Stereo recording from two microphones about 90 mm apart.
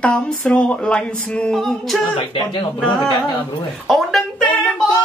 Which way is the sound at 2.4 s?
65° left (ahead or behind).